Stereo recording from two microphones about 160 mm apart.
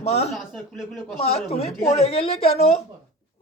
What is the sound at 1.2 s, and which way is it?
Speech, 40° left (ahead or behind).